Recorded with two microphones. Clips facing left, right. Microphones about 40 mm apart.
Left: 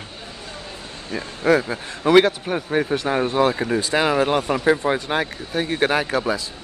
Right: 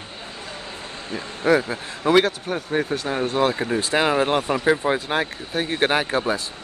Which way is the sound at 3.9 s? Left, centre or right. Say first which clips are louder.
Even; right.